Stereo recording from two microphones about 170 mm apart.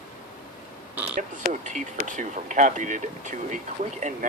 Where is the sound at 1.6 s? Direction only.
45° right (ahead or behind).